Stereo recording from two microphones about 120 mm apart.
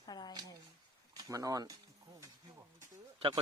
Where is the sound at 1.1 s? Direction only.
30° right (ahead or behind).